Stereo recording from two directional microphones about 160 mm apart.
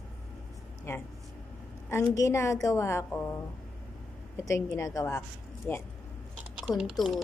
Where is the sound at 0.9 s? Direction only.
15° left (ahead or behind).